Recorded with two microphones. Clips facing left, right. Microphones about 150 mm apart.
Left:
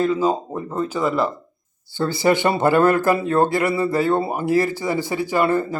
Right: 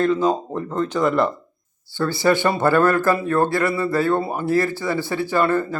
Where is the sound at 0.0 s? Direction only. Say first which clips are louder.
Right 1 dB; 10° left (ahead or behind).